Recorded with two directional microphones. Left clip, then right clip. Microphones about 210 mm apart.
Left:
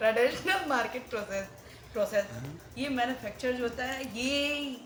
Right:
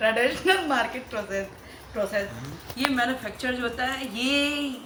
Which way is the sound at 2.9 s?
10° left (ahead or behind).